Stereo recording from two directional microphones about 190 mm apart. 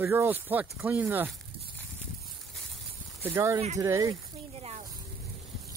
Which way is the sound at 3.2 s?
15° right (ahead or behind).